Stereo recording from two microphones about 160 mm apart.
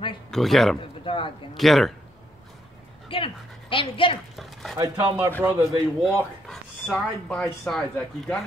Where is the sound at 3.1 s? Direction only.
35° left (ahead or behind).